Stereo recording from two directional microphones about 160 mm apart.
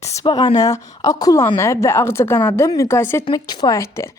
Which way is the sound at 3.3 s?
25° left (ahead or behind).